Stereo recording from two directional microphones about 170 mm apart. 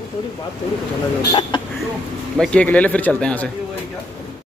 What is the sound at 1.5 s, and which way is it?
Throat clearing, 25° left (ahead or behind).